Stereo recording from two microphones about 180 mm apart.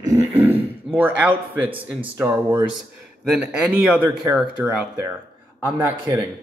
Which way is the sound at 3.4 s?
5° right (ahead or behind).